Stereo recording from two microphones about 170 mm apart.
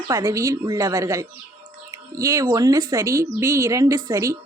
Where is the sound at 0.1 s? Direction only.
15° right (ahead or behind).